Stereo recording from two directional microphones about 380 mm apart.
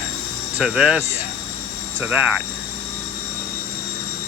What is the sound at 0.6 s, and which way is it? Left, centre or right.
Speech, centre.